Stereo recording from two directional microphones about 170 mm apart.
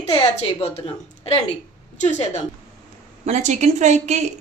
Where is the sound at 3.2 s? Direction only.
45° right (ahead or behind).